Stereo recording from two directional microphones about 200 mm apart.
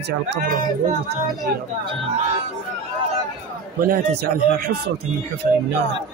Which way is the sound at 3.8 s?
50° right (ahead or behind).